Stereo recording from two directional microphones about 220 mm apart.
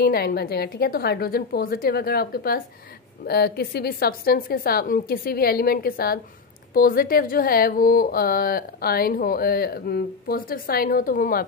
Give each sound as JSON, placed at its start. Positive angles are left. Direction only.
{"t": 0.0, "sound": "speech", "side_deg": 45}